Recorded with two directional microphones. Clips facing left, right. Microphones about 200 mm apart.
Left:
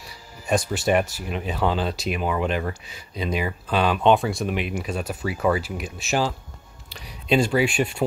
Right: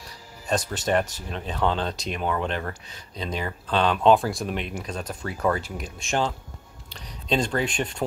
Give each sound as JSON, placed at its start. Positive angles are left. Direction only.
{"t": 0.5, "sound": "speech", "side_deg": 10}